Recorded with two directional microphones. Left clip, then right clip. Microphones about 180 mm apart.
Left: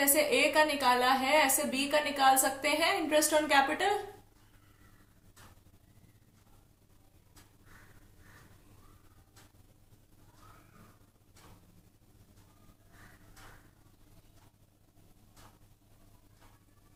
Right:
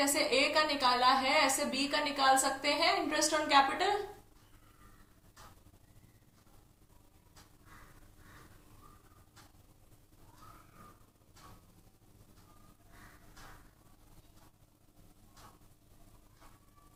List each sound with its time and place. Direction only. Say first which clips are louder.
0.0 s a woman's voice: left 2 dB; 50° left (ahead or behind)